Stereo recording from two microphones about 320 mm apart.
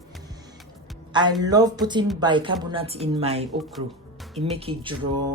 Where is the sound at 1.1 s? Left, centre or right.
Centre.